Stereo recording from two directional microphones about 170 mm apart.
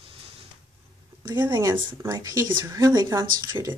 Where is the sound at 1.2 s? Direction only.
25° right (ahead or behind).